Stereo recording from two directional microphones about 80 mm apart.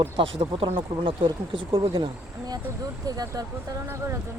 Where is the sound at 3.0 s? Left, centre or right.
Right.